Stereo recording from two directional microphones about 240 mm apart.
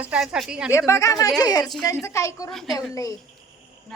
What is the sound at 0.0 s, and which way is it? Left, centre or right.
Speech, centre.